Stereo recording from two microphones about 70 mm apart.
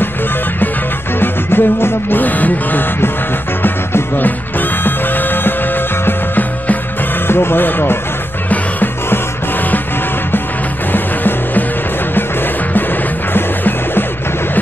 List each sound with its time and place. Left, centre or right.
1.2 s music: left
7.2 s speech: left
8.5 s music: left
10.9 s music: left
13.3 s music: left